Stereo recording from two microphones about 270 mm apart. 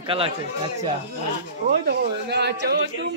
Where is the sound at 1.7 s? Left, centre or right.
Right.